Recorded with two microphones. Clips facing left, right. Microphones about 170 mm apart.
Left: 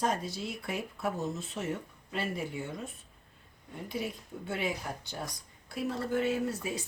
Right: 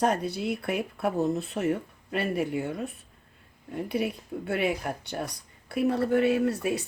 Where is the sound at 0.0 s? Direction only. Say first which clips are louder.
Right 6 dB; 65° right (ahead or behind).